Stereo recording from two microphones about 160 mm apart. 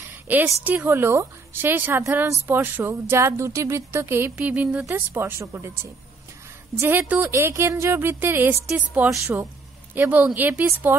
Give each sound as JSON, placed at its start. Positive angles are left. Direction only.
{"t": 0.3, "sound": "speech", "side_deg": -10}